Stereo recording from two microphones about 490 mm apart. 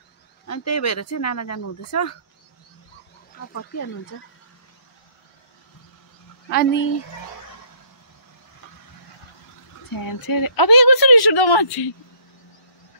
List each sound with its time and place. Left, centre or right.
0.5 s speech: left
6.5 s speech: left
9.9 s speech: left